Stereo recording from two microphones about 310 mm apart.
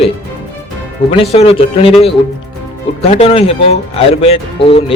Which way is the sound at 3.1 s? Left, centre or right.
Centre.